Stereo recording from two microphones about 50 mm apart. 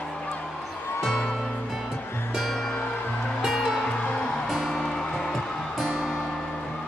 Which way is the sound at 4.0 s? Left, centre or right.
Left.